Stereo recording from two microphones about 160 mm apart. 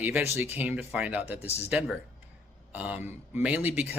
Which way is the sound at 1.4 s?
40° left (ahead or behind).